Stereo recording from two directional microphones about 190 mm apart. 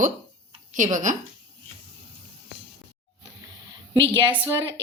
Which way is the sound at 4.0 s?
25° right (ahead or behind).